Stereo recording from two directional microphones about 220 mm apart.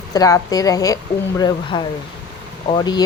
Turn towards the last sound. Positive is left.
turn(degrees=20)  # may be behind; listen again after turning